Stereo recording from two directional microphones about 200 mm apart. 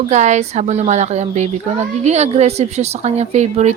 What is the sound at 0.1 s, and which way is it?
A woman's voice, 35° right (ahead or behind).